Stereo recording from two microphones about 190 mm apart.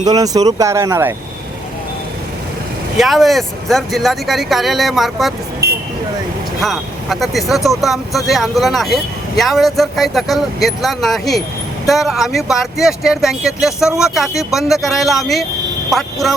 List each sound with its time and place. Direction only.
0.0 s speech: 20° right (ahead or behind)
3.0 s speech: centre (ahead or behind)
5.6 s vehicle: 60° right (ahead or behind)
6.6 s speech: centre (ahead or behind)